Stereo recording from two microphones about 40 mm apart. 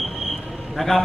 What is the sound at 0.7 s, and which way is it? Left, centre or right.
Speech, centre.